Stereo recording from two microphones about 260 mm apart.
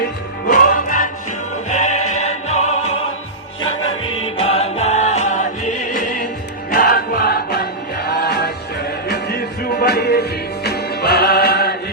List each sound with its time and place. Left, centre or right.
0.4 s music: left
4.0 s music: left